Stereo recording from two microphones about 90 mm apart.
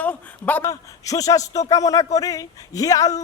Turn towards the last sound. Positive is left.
turn(degrees=40)  # may be behind; listen again after turning